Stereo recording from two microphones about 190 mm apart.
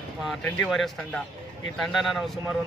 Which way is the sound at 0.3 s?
Centre (ahead or behind).